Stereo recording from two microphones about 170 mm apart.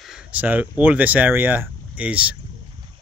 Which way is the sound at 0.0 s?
5° right (ahead or behind).